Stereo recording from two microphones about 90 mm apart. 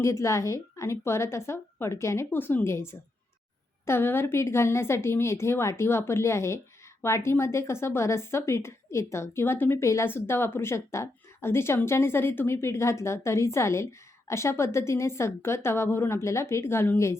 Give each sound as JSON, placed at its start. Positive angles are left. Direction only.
{"t": 0.0, "sound": "a woman's voice", "side_deg": 35}